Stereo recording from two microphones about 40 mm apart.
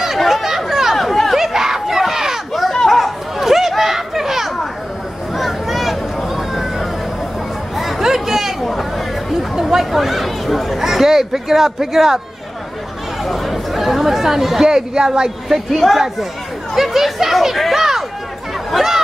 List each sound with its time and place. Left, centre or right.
0.2 s chatter: centre
1.4 s crowd: centre
2.5 s chatter: centre
5.3 s vehicle: centre
7.7 s chatter: centre
9.6 s chatter: centre
13.2 s speech: centre
15.4 s speech: centre
16.7 s chatter: centre